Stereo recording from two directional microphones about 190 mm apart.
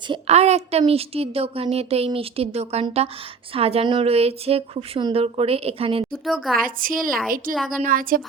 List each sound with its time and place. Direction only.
0.1 s a woman's voice: 35° right (ahead or behind)
6.1 s a woman's voice: centre (ahead or behind)
6.6 s a woman's voice: 50° right (ahead or behind)